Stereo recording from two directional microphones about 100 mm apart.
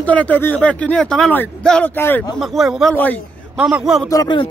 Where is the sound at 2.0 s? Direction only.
20° left (ahead or behind).